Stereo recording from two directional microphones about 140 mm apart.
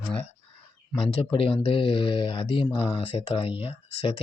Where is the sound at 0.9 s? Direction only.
40° left (ahead or behind).